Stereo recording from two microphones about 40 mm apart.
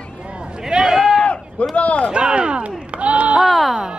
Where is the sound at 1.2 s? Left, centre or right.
Left.